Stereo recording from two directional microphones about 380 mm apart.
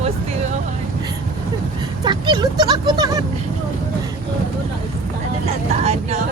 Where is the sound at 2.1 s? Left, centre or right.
Centre.